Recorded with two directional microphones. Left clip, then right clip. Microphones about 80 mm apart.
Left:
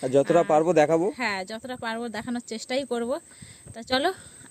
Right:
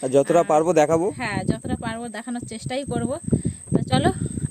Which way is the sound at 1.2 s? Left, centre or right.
Left.